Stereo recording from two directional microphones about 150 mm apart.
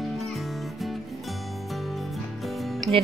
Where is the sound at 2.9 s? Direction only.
Centre (ahead or behind).